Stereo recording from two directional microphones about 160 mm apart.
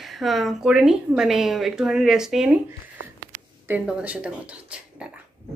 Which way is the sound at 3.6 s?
10° right (ahead or behind).